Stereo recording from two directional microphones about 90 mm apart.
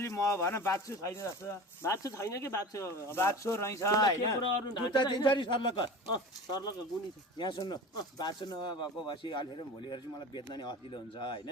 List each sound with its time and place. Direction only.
0.0 s speech: 35° left (ahead or behind)
4.6 s speech: 55° left (ahead or behind)
7.3 s speech: 65° left (ahead or behind)
7.6 s speech: 45° left (ahead or behind); by 11.4 s 65° left (ahead or behind)